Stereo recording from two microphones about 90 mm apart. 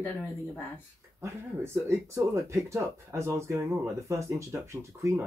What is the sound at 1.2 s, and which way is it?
Speech, 30° right (ahead or behind).